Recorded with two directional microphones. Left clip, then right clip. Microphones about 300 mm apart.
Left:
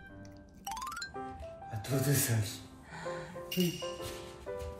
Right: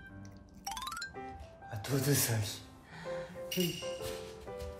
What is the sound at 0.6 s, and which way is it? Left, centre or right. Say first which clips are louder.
Music: left 1 dB; centre.